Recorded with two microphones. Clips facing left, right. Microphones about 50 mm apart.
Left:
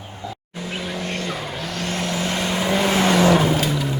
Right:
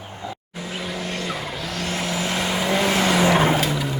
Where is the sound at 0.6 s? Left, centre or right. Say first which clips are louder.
Left 2 dB; centre.